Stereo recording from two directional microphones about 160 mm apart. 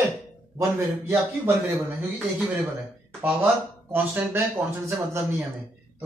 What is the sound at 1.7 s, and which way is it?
Speech, centre (ahead or behind).